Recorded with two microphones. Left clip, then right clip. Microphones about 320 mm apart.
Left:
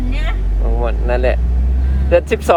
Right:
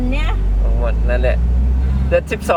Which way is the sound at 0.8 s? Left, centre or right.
Left.